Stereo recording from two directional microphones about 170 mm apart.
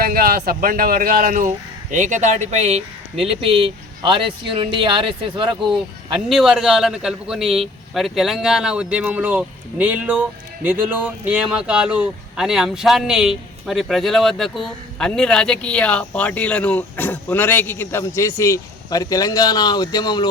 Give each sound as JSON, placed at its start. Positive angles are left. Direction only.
{"t": 0.0, "sound": "speech", "side_deg": -60}
{"t": 6.2, "sound": "a man's voice", "side_deg": 0}